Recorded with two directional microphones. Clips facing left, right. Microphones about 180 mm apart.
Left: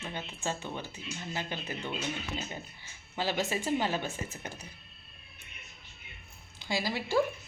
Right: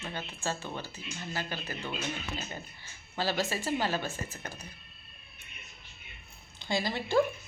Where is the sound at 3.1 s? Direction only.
15° left (ahead or behind).